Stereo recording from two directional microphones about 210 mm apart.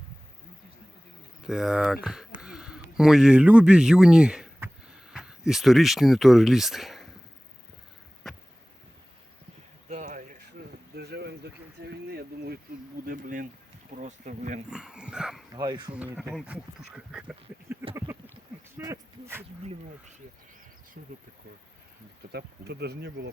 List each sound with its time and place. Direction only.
1.5 s speech: centre (ahead or behind)
9.9 s a sound: 40° right (ahead or behind)
13.9 s speech: 35° right (ahead or behind)
14.7 s dog: 5° right (ahead or behind)
15.5 s speech: 20° right (ahead or behind)
15.9 s speech: 5° right (ahead or behind)
17.9 s a sound: 15° right (ahead or behind)
22.3 s speech: 50° right (ahead or behind)